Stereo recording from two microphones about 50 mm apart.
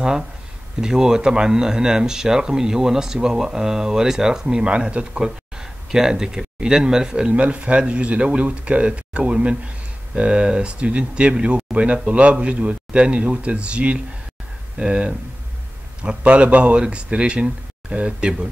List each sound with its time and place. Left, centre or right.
0.0 s speech: centre
5.2 s speech: centre